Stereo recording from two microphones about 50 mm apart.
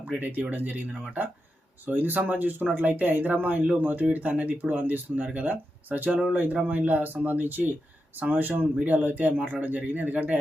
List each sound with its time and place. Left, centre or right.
0.2 s speech: right